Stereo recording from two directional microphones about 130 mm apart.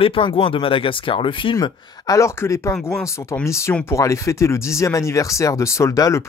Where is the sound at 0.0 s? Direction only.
45° left (ahead or behind).